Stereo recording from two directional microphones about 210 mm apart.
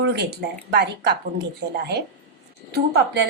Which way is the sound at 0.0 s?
50° right (ahead or behind).